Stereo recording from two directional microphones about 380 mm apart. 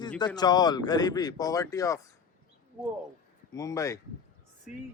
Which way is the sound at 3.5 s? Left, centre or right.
Centre.